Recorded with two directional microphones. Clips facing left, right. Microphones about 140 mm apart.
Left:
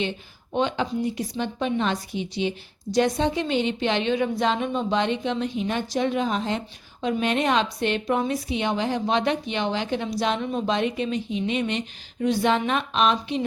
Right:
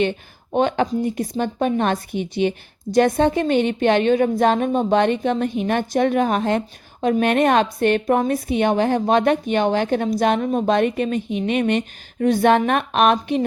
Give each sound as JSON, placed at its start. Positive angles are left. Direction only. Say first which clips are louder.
{"t": 0.5, "sound": "a woman's voice", "louder": "right 5 dB", "side_deg": -50}